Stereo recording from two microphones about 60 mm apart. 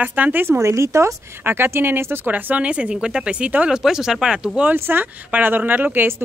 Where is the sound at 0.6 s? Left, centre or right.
Right.